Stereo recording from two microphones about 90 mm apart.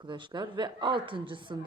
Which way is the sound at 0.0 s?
60° right (ahead or behind).